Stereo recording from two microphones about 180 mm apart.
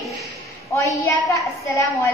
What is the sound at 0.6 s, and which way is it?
A woman's voice, 15° left (ahead or behind).